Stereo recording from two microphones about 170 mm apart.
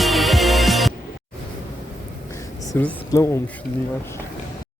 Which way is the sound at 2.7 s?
10° left (ahead or behind).